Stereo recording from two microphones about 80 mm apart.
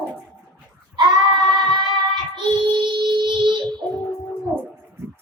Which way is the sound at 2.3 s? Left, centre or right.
Right.